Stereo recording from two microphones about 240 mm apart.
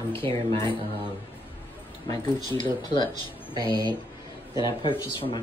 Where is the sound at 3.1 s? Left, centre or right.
Centre.